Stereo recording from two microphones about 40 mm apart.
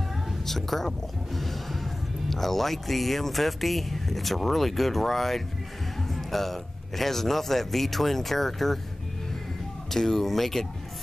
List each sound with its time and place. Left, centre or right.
0.5 s speech: centre
6.1 s music: centre
7.0 s speech: centre
9.9 s speech: centre